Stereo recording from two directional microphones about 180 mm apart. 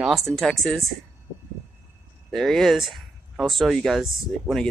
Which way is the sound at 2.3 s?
Centre (ahead or behind).